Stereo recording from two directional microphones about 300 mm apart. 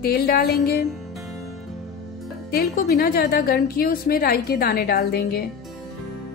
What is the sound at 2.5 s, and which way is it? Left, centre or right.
A woman's voice, left.